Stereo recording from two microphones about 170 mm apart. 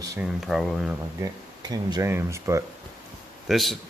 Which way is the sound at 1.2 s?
25° right (ahead or behind).